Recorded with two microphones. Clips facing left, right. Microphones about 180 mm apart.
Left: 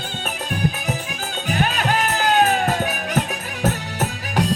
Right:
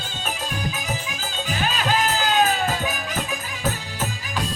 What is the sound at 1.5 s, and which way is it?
Music, 60° left (ahead or behind).